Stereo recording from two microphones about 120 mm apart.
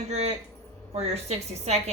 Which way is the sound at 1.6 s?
65° right (ahead or behind).